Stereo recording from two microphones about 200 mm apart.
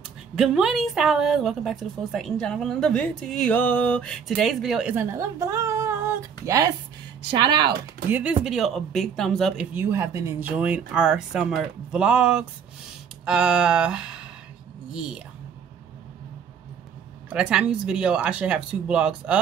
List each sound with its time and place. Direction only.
0.4 s a woman's voice: centre (ahead or behind); by 7.7 s 20° right (ahead or behind)
8.1 s a woman's voice: 5° right (ahead or behind)
9.8 s a woman's voice: 10° right (ahead or behind)
17.3 s a woman's voice: 5° right (ahead or behind)